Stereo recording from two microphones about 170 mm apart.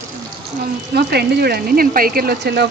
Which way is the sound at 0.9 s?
70° right (ahead or behind).